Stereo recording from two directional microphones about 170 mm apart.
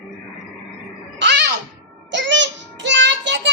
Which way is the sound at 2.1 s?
90° right.